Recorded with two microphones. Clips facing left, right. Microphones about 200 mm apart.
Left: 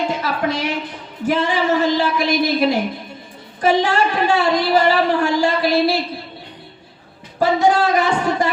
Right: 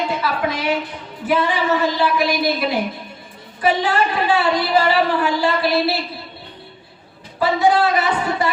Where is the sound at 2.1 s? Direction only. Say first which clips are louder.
Left 1 dB; 45° left (ahead or behind).